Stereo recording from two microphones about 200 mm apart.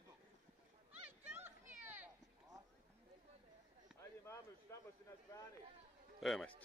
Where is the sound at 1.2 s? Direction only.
10° right (ahead or behind).